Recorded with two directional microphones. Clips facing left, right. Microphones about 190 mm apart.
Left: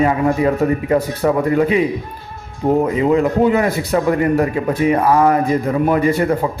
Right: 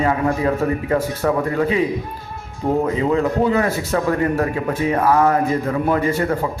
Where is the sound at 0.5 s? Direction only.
15° left (ahead or behind).